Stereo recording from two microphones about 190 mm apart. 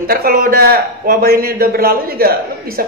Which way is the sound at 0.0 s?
50° right (ahead or behind).